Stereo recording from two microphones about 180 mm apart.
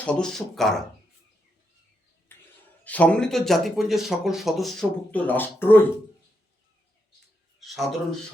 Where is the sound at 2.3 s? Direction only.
10° left (ahead or behind).